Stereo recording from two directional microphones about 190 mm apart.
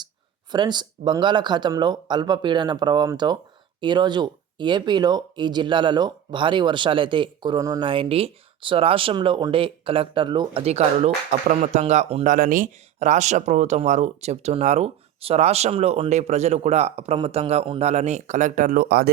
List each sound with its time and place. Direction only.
0.5 s speech: 25° right (ahead or behind); by 19.1 s 55° right (ahead or behind)